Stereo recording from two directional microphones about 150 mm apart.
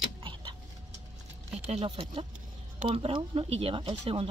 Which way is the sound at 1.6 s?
40° right (ahead or behind).